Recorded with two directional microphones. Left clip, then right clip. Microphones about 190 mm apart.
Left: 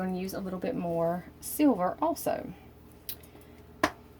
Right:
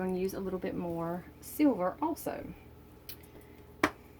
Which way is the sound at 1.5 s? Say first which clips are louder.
Left 3 dB; 50° left (ahead or behind).